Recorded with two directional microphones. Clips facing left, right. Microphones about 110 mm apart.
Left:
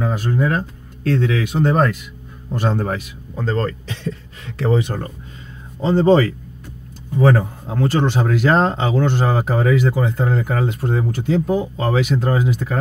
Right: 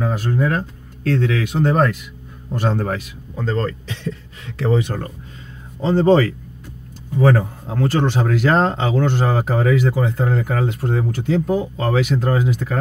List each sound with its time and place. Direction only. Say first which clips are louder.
0.0 s speech: even; 25° left (ahead or behind)
3.3 s speech: left 1 dB; 40° left (ahead or behind)
4.6 s speech: even; 30° left (ahead or behind)